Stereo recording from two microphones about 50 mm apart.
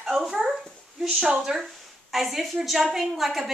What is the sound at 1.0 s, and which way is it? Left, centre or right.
Speech, centre.